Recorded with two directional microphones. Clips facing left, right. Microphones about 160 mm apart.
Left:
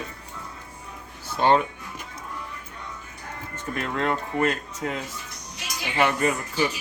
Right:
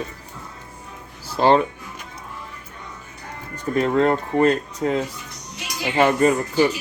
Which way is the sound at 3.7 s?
35° right (ahead or behind).